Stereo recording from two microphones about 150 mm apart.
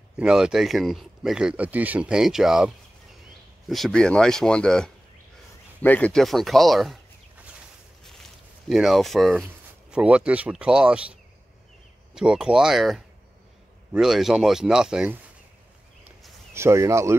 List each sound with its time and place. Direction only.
0.2 s speech: 5° right (ahead or behind)
8.0 s speech: centre (ahead or behind)
12.2 s speech: 5° right (ahead or behind)
16.0 s a sound: centre (ahead or behind)
16.5 s speech: 20° right (ahead or behind)